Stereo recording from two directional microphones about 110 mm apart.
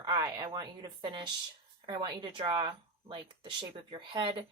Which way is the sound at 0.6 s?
40° right (ahead or behind).